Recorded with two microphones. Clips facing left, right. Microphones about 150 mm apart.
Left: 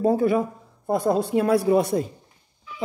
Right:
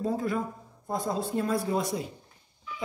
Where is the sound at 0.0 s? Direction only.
70° left (ahead or behind).